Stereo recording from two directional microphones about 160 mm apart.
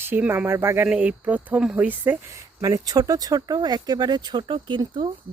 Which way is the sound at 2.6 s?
25° right (ahead or behind).